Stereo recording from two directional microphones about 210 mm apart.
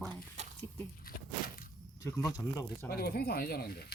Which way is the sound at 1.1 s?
45° left (ahead or behind).